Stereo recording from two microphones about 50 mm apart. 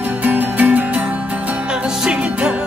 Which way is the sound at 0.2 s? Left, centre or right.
Right.